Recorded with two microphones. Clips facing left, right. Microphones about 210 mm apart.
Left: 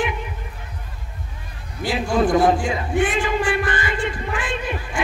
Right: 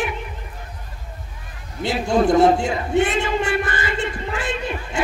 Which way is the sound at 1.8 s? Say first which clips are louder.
Right 1 dB; 25° right (ahead or behind).